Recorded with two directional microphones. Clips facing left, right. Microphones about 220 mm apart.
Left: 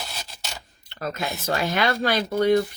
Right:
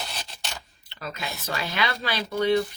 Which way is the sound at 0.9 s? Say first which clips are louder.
Left 6 dB; 45° left (ahead or behind).